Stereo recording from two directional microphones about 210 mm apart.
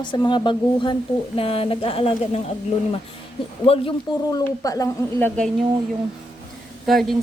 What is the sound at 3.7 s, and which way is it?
A woman's voice, 20° left (ahead or behind).